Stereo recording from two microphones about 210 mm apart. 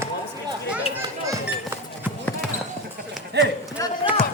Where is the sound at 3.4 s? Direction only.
55° right (ahead or behind).